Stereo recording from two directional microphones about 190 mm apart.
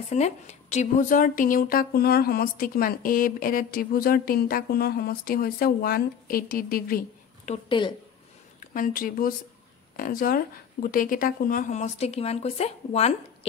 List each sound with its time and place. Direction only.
0.1 s speech: 35° left (ahead or behind)